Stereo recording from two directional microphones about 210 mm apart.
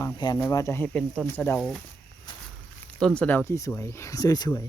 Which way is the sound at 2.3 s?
20° left (ahead or behind).